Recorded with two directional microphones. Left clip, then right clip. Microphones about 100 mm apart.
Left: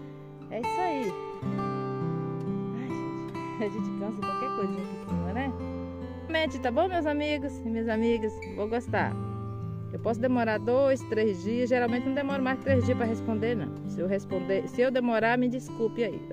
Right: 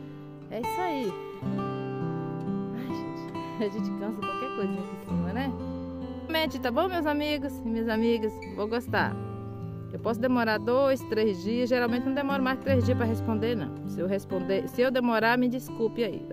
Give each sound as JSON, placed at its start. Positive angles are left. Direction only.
{"t": 0.6, "sound": "music", "side_deg": -5}
{"t": 2.7, "sound": "music", "side_deg": -10}
{"t": 4.2, "sound": "speech", "side_deg": 5}
{"t": 6.3, "sound": "speech", "side_deg": -15}
{"t": 10.2, "sound": "speech", "side_deg": -20}
{"t": 12.7, "sound": "speech", "side_deg": -5}
{"t": 13.3, "sound": "speech", "side_deg": -20}
{"t": 13.6, "sound": "speech", "side_deg": -10}
{"t": 14.8, "sound": "speech", "side_deg": -20}